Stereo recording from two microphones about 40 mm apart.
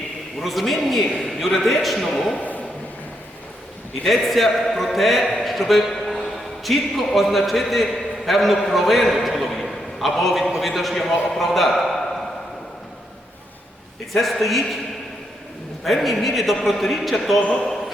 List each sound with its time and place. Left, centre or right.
0.3 s a man's voice: centre
2.4 s a sound: left
4.0 s a man's voice: centre
14.1 s a man's voice: centre
15.8 s a man's voice: centre
17.4 s a man's voice: left